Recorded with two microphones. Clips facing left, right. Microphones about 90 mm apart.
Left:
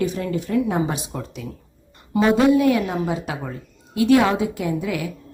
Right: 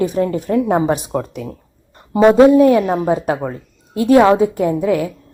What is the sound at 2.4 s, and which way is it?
A woman's voice, 35° right (ahead or behind).